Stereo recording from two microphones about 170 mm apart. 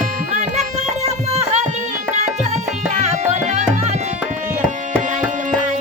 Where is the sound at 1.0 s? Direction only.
40° right (ahead or behind).